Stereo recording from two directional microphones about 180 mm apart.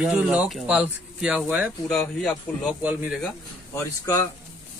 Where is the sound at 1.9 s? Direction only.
5° left (ahead or behind).